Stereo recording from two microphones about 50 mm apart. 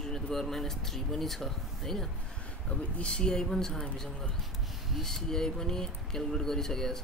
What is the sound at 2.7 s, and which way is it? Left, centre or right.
Speech, left.